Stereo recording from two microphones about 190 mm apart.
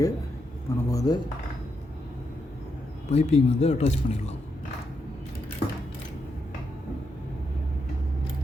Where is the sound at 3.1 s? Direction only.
35° left (ahead or behind).